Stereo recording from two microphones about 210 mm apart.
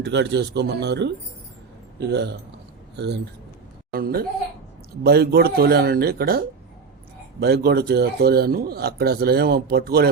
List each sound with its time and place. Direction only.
0.0 s speech: 55° right (ahead or behind)